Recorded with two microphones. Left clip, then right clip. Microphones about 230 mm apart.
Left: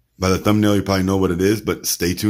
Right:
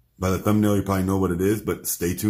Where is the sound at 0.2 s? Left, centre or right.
Left.